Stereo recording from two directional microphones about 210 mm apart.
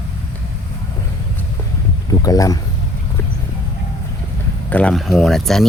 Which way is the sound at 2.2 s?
15° left (ahead or behind).